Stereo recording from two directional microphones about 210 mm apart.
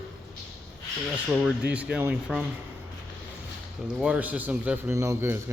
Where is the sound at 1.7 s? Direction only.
5° right (ahead or behind).